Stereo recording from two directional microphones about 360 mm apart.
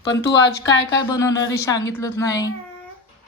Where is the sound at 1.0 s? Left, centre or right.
Centre.